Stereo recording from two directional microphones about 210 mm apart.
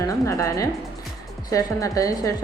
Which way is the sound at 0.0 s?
15° left (ahead or behind).